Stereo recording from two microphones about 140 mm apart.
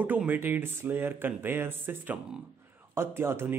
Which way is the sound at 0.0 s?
10° right (ahead or behind).